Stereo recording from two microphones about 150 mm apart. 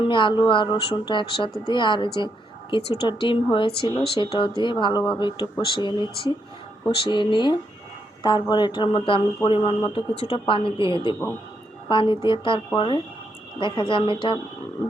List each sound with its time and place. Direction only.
0.1 s speech: 30° left (ahead or behind)